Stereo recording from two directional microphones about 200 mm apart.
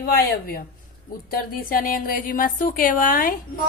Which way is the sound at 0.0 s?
45° left (ahead or behind).